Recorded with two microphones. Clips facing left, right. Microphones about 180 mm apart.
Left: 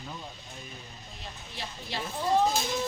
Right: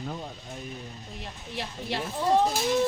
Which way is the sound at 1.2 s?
70° right (ahead or behind).